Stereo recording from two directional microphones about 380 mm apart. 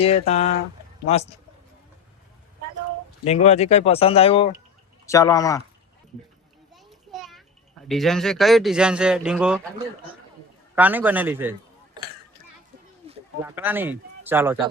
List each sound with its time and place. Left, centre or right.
0.0 s speech: centre
3.2 s speech: centre
6.7 s children playing: centre
7.9 s speech: centre
10.8 s speech: centre
12.0 s a sound: centre
13.1 s speech: centre